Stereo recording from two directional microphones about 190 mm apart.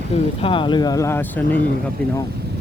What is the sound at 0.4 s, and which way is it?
Speech, 25° left (ahead or behind).